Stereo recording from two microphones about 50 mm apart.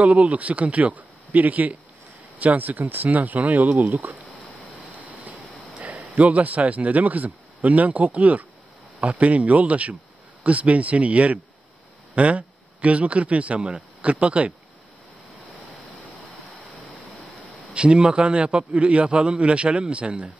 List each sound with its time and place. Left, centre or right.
0.0 s a man's voice: right
4.9 s a sound: right
5.9 s a man's voice: right
17.7 s a man's voice: right